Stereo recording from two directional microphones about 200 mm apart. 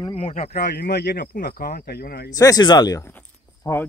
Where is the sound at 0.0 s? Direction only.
30° left (ahead or behind); by 2.3 s 50° left (ahead or behind).